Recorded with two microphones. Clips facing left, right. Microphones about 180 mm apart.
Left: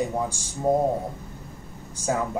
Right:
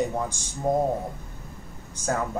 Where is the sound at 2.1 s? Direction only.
10° left (ahead or behind).